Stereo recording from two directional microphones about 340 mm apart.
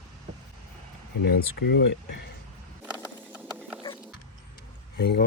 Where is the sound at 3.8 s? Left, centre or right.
Centre.